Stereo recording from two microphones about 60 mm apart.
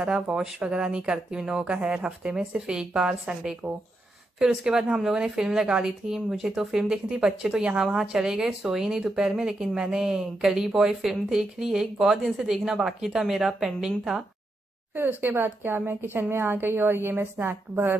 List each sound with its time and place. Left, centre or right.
0.0 s speech: centre
15.0 s a woman's voice: right